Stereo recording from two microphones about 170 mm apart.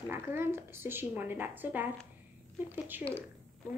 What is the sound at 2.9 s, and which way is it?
Speech, 10° right (ahead or behind).